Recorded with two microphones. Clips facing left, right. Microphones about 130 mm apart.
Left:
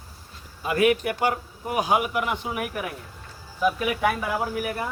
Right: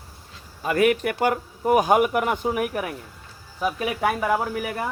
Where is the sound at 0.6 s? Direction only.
45° right (ahead or behind).